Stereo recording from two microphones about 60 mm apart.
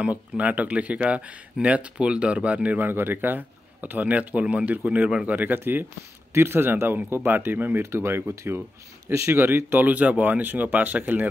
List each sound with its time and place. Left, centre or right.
0.0 s speech: right
2.9 s speech: right
9.0 s speech: right
9.8 s speech: right